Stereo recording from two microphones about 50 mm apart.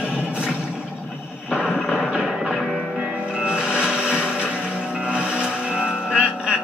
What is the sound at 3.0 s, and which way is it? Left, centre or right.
Music, right.